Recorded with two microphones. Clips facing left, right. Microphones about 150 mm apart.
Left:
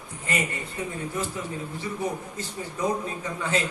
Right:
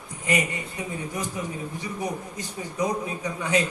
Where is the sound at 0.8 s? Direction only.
15° right (ahead or behind).